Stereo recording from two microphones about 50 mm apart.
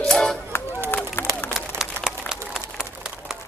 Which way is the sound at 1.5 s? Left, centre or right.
Centre.